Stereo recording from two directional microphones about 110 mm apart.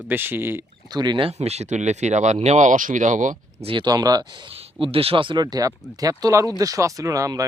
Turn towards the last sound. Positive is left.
turn(degrees=-30)  # may be behind; listen again after turning